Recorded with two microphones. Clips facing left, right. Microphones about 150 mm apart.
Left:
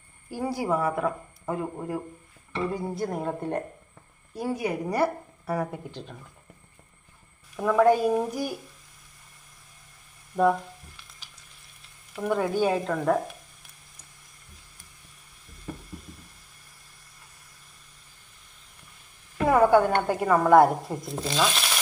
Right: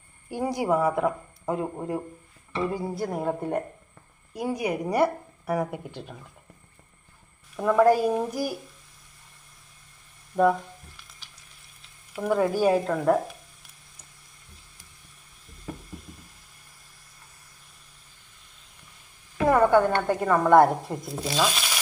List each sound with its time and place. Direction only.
0.3 s a woman's voice: 20° right (ahead or behind)
2.7 s a woman's voice: 5° right (ahead or behind)
7.5 s speech: centre (ahead or behind)
10.3 s a sound: centre (ahead or behind)
12.1 s speech: centre (ahead or behind)
19.4 s a woman's voice: 5° left (ahead or behind)